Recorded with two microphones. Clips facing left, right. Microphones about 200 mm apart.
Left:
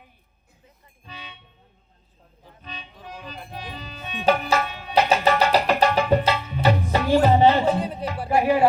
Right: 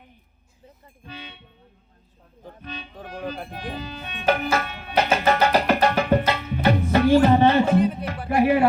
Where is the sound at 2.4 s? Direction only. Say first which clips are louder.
Right 5 dB; 50° right (ahead or behind).